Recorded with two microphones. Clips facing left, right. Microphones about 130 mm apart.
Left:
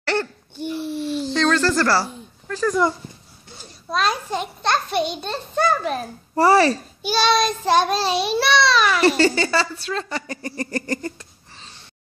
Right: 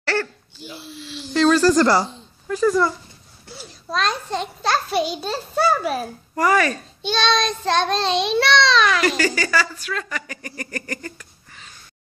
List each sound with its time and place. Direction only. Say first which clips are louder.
0.0 s laughter: left 1 dB; 20° left (ahead or behind)
0.6 s babbling: left 11 dB; 55° left (ahead or behind)
1.3 s speech: right 5 dB; 10° right (ahead or behind)
3.5 s a child's voice: left 1 dB; 5° left (ahead or behind)
6.3 s a child's voice: left 4 dB; 30° left (ahead or behind)
7.0 s a child's voice: left 1 dB; 10° left (ahead or behind)
9.0 s speech: left 4 dB; 30° left (ahead or behind)